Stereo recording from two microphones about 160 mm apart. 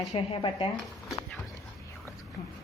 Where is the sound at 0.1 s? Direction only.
40° left (ahead or behind).